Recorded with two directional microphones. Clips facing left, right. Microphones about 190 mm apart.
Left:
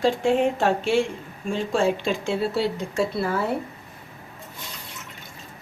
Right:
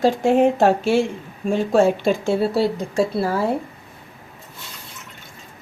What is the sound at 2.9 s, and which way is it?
Speech, 35° right (ahead or behind).